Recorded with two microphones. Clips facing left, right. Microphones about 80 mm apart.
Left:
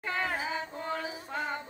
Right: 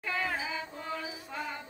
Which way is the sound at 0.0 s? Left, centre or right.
Left.